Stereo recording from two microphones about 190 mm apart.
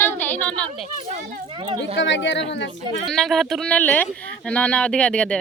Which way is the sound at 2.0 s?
75° left (ahead or behind).